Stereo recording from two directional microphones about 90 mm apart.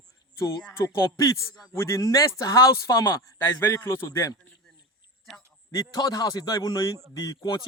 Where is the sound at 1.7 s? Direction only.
30° left (ahead or behind).